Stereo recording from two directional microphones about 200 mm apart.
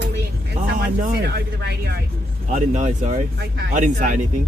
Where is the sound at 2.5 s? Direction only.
35° right (ahead or behind).